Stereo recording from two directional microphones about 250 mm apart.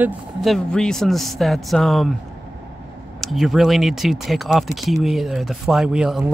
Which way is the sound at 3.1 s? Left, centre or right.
Centre.